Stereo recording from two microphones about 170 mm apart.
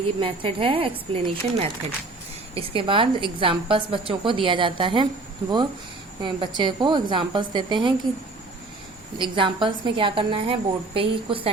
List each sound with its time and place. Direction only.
0.2 s a woman's voice: 30° right (ahead or behind)
6.2 s a woman's voice: 25° right (ahead or behind)
9.1 s a woman's voice: 30° right (ahead or behind)